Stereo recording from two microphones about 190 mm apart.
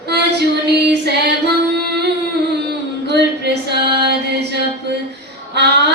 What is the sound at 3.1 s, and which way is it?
Female singing, 60° right (ahead or behind).